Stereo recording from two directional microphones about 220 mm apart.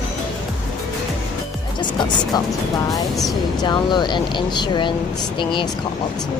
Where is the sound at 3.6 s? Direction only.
20° left (ahead or behind).